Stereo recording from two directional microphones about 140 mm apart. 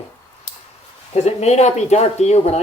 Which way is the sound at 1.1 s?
50° left (ahead or behind).